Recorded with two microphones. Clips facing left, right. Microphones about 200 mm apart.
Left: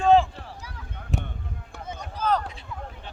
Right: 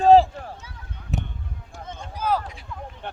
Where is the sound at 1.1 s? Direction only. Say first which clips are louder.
Right 1 dB; centre (ahead or behind).